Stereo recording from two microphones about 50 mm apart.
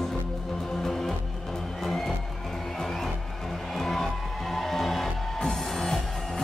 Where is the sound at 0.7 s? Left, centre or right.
Centre.